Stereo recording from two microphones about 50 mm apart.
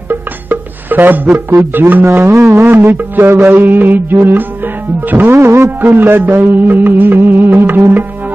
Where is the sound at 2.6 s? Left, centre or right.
Right.